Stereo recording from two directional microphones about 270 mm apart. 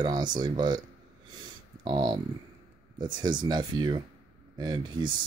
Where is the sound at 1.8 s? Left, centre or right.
Centre.